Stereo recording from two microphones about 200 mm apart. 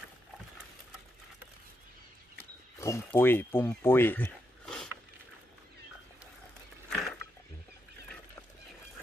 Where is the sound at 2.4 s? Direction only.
10° left (ahead or behind).